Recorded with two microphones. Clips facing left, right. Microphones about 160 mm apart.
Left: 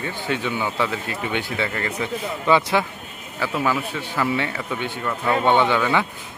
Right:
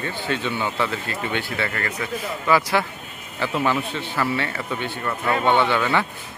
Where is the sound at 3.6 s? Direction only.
5° left (ahead or behind).